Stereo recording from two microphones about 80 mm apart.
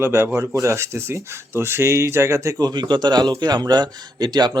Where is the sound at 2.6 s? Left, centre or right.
Right.